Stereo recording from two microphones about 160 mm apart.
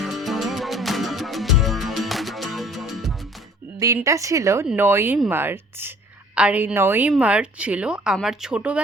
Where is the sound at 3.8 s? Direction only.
20° right (ahead or behind).